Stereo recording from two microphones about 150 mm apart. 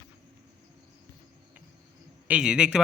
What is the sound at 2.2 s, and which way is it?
Speech, 5° right (ahead or behind).